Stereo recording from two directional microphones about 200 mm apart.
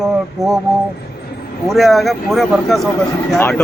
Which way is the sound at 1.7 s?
Centre (ahead or behind).